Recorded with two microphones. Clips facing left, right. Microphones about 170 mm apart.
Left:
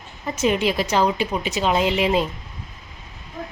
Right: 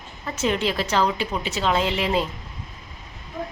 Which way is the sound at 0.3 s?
15° left (ahead or behind).